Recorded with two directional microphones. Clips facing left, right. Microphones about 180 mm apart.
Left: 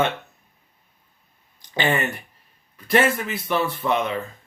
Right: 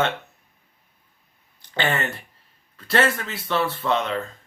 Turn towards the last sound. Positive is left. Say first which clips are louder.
# left 1 dB
turn(degrees=15)  # may be behind; listen again after turning